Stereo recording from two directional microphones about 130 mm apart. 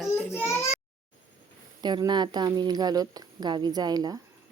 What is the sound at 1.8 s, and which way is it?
Speech, 35° right (ahead or behind).